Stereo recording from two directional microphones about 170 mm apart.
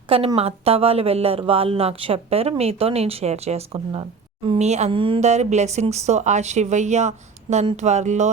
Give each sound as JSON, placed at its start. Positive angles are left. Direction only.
{"t": 0.1, "sound": "speech", "side_deg": -35}